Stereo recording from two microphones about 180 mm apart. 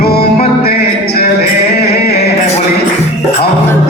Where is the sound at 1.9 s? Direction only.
60° left (ahead or behind).